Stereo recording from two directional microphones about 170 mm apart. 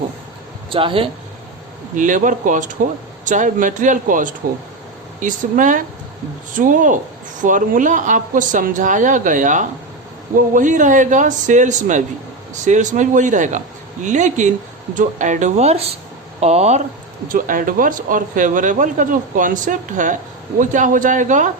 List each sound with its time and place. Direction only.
0.7 s speech: 30° right (ahead or behind)
2.0 s speech: 50° right (ahead or behind)
17.2 s speech: 50° right (ahead or behind)